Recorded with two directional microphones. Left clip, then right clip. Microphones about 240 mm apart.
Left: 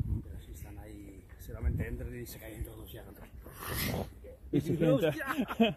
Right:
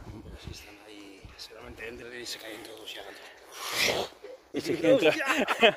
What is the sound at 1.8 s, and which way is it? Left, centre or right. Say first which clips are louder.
Speech: right 5 dB; right.